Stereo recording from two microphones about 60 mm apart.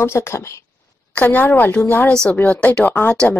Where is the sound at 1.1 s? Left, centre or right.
Left.